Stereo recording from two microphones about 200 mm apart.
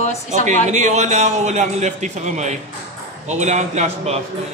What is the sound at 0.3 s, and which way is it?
A man's voice, 35° right (ahead or behind).